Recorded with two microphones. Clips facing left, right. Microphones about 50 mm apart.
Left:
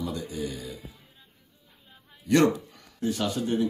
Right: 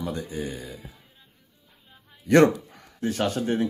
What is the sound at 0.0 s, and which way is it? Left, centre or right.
Speech, right.